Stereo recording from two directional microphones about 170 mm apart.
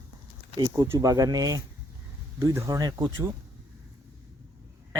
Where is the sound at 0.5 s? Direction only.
20° right (ahead or behind).